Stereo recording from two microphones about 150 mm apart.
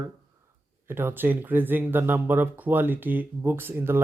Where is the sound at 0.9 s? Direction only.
15° right (ahead or behind).